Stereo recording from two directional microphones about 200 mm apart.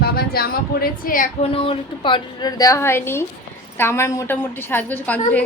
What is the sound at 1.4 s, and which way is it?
A woman's voice, 25° left (ahead or behind).